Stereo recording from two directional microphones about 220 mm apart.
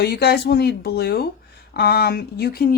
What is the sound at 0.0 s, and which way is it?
Speech, 45° left (ahead or behind).